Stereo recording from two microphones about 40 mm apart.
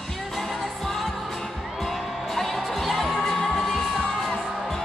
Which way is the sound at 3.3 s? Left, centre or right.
Centre.